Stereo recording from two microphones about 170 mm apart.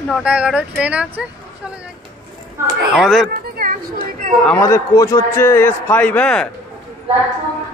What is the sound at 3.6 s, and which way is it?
Speech, 60° right (ahead or behind).